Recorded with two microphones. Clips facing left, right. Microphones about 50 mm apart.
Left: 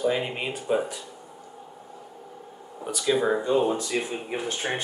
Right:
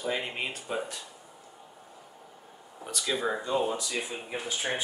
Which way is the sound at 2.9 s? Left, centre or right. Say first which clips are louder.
Left 7 dB; centre.